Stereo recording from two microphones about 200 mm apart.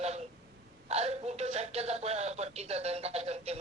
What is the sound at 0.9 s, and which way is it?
Speech, 30° right (ahead or behind).